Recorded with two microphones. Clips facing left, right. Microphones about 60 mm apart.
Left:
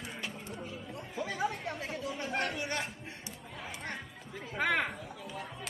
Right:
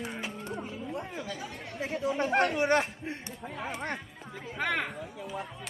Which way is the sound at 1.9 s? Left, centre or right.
Right.